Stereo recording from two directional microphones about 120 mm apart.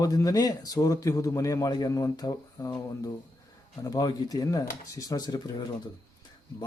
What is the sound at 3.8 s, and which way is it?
A man's voice, 30° left (ahead or behind).